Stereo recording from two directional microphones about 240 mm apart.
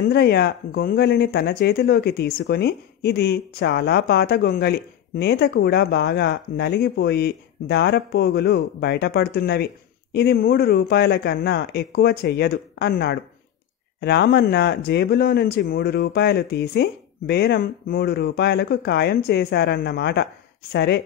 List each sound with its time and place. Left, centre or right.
0.1 s speech: left